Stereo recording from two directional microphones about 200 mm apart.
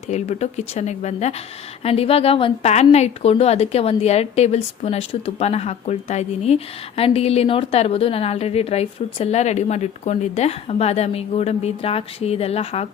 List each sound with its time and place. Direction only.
0.1 s a woman's voice: 35° left (ahead or behind)